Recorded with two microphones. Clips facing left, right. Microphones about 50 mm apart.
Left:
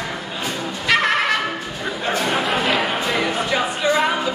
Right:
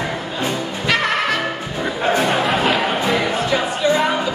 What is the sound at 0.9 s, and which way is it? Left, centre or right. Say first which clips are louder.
Music: left 1 dB; centre.